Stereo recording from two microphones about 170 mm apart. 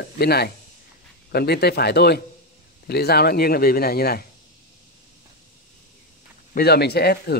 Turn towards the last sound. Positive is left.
turn(degrees=70)  # may be behind; listen again after turning